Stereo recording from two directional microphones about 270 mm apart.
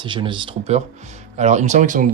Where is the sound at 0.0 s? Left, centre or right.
Centre.